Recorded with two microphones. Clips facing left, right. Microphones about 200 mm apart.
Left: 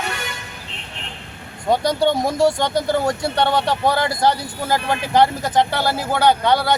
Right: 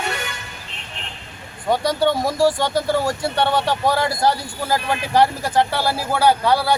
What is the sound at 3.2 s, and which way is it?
Speech, 5° right (ahead or behind).